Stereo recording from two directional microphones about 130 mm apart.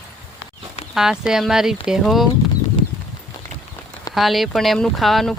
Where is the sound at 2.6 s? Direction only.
30° left (ahead or behind).